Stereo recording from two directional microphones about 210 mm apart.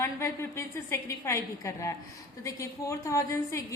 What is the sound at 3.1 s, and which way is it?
Speech, 15° left (ahead or behind).